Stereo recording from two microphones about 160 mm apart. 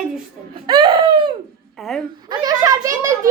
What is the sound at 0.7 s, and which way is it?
Speech, 30° right (ahead or behind).